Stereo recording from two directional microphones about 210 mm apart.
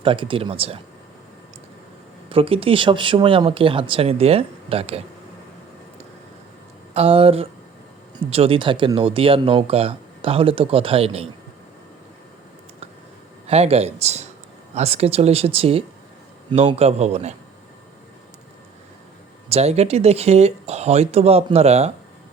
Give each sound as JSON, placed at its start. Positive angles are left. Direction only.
{"t": 0.0, "sound": "speech", "side_deg": -25}
{"t": 2.3, "sound": "speech", "side_deg": -25}
{"t": 6.9, "sound": "speech", "side_deg": -25}
{"t": 13.5, "sound": "speech", "side_deg": -30}
{"t": 19.5, "sound": "speech", "side_deg": -30}